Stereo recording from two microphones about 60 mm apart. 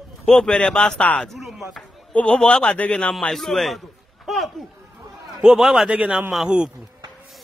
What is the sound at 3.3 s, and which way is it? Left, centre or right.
A man's voice, centre.